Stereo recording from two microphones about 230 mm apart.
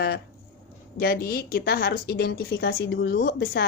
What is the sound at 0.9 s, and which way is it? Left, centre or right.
Speech, left.